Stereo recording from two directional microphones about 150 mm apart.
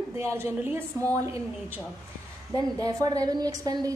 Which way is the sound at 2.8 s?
25° right (ahead or behind).